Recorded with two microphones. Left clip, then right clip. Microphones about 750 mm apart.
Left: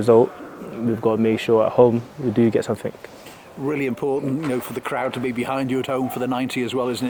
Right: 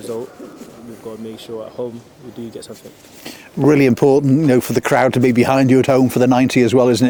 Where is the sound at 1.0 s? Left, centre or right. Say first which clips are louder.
Left 11 dB; left.